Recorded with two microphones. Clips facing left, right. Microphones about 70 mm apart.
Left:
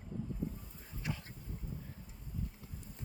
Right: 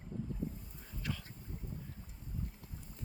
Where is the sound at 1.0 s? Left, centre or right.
Centre.